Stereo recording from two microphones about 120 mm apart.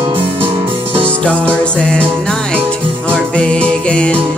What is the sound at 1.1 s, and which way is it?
Music, 10° left (ahead or behind).